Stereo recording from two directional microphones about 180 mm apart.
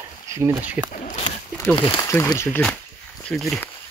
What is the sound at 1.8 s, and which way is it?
Speech, 30° left (ahead or behind).